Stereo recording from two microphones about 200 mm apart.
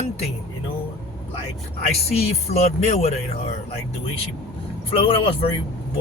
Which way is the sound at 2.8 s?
35° left (ahead or behind).